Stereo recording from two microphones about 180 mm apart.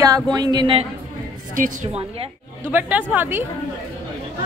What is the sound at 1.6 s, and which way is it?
Speech, 45° right (ahead or behind).